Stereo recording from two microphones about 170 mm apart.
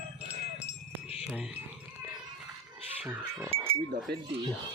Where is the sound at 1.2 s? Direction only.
5° right (ahead or behind).